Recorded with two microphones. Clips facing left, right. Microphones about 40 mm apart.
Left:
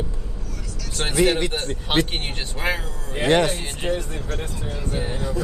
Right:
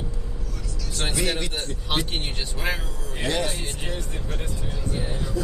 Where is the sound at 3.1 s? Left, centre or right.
Left.